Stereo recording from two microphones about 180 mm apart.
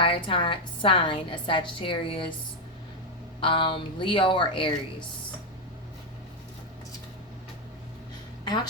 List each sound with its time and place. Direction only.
0.0 s a woman's voice: 30° left (ahead or behind)
3.4 s a woman's voice: 30° left (ahead or behind)